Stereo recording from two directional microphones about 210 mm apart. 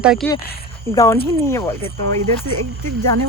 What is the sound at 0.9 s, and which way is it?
Speech, 10° left (ahead or behind).